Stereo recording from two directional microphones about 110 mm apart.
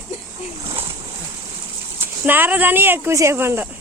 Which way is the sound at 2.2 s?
20° right (ahead or behind).